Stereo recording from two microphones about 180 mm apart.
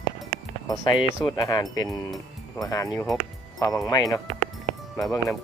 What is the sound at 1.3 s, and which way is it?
Speech, 20° left (ahead or behind).